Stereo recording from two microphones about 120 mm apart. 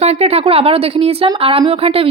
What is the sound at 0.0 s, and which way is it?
Speech, 60° right (ahead or behind).